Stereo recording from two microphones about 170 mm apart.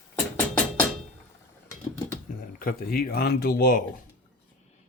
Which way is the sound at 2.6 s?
60° left (ahead or behind).